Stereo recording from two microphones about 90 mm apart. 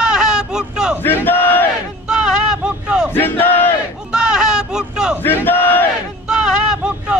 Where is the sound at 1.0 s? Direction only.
20° left (ahead or behind).